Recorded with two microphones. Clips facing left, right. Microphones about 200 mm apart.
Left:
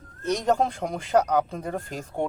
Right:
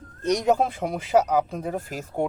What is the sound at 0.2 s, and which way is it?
Speech, 15° right (ahead or behind).